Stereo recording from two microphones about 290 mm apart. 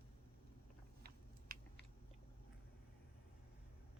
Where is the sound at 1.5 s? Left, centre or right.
Right.